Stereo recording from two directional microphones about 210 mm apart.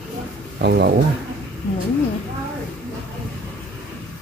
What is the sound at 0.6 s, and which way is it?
Speech, 50° right (ahead or behind).